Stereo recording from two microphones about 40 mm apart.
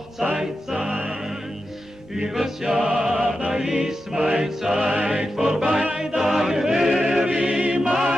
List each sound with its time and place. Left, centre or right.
0.3 s music: centre
2.1 s music: centre
7.2 s music: right
7.9 s music: centre